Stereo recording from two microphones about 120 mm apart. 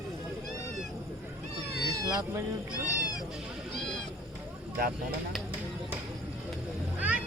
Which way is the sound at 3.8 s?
5° left (ahead or behind).